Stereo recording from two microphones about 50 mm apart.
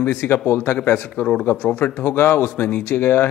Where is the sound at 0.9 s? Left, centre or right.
Left.